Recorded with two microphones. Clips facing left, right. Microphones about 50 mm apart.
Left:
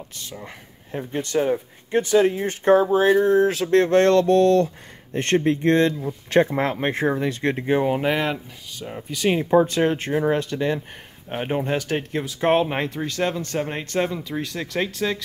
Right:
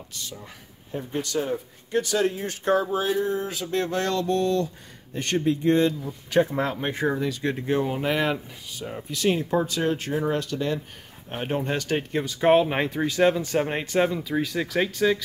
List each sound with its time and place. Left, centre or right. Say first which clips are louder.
0.1 s speech: left 2 dB; left
3.3 s a sound: left 10 dB; left
5.1 s speech: left 4 dB; left
6.5 s speech: left 4 dB; left
7.6 s speech: left 5 dB; left
8.8 s speech: left 2 dB; centre
9.3 s speech: left 7 dB; left
11.2 s speech: left 3 dB; centre
12.7 s speech: right 1 dB; centre